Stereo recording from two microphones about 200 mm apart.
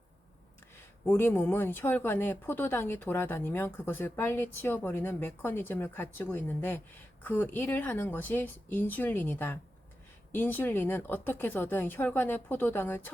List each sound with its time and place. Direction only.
1.0 s speech: 10° left (ahead or behind)